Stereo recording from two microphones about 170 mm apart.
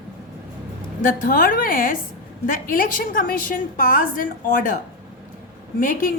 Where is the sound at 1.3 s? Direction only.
55° left (ahead or behind).